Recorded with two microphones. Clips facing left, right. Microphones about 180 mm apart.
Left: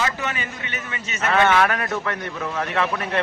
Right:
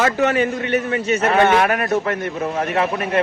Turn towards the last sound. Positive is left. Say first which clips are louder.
# right 4 dB
turn(degrees=-25)  # may be behind; listen again after turning